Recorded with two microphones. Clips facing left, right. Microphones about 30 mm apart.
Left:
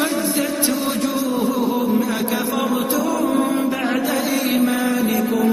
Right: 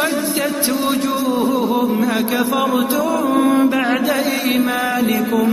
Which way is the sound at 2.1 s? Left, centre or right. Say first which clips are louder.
Right 4 dB; centre.